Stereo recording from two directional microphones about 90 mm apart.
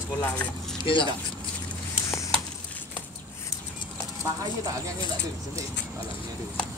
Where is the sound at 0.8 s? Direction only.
65° left (ahead or behind).